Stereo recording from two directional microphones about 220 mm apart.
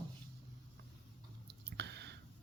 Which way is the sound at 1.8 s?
50° right (ahead or behind).